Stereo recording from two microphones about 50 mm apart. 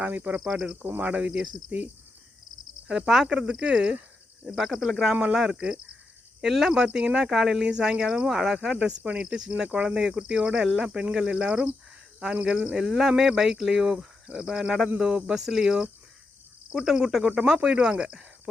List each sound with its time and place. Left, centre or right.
0.0 s cricket: right
0.3 s speech: centre
0.9 s speech: right
2.8 s speech: centre
5.2 s speech: centre
7.3 s speech: centre
7.6 s speech: centre
8.7 s speech: right
14.9 s speech: centre